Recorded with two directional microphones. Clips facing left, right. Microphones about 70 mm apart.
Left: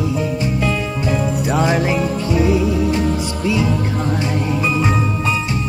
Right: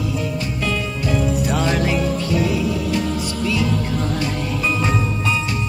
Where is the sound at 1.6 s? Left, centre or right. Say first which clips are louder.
Left 5 dB; left.